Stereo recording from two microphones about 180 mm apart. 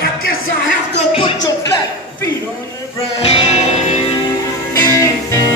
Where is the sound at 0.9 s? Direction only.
30° left (ahead or behind).